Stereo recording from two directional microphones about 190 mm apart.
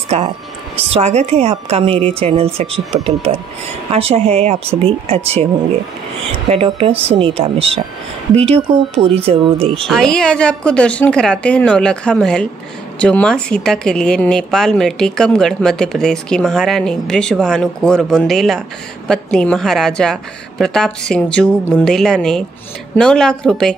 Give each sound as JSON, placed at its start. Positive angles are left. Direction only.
{"t": 0.1, "sound": "a woman's voice", "side_deg": -35}
{"t": 6.5, "sound": "a woman's voice", "side_deg": -30}
{"t": 9.8, "sound": "speech", "side_deg": 5}